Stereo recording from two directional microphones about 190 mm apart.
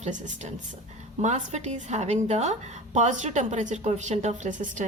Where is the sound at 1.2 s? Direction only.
35° right (ahead or behind).